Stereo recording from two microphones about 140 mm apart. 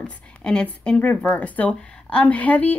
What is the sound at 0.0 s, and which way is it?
Speech, 5° left (ahead or behind).